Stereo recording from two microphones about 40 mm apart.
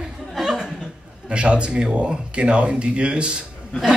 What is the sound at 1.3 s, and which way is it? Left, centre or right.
A man's voice, right.